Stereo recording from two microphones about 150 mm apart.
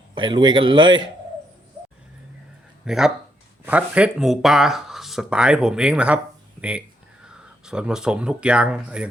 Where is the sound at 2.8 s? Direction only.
Centre (ahead or behind).